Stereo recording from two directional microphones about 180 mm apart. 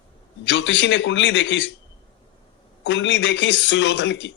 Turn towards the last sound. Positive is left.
turn(degrees=80)